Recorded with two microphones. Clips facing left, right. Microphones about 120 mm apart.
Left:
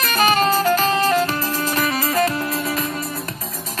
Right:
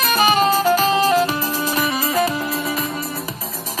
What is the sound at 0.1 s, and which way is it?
Music, 15° right (ahead or behind).